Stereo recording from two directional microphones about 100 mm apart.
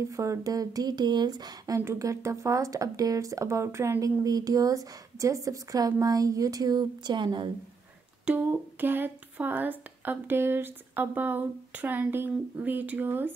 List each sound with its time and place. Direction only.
0.0 s speech: 30° right (ahead or behind)
1.8 s speech: 30° right (ahead or behind); by 7.5 s 50° right (ahead or behind)
8.3 s speech: 20° right (ahead or behind)